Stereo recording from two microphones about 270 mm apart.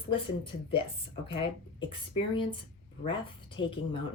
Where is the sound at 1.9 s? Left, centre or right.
Centre.